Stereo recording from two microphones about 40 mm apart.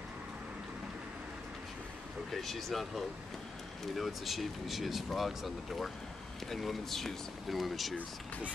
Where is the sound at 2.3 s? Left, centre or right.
Centre.